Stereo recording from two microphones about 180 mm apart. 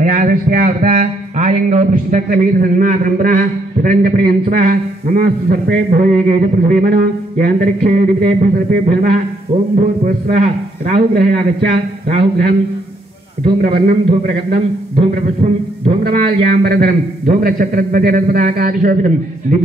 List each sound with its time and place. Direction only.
0.0 s a man's voice: 45° right (ahead or behind)
0.9 s a man's voice: 40° right (ahead or behind)
13.6 s a man's voice: 50° right (ahead or behind)
15.0 s a man's voice: 35° right (ahead or behind)
16.0 s a man's voice: 55° right (ahead or behind)